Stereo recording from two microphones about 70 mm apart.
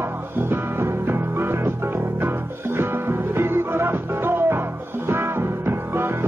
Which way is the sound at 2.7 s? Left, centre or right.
Right.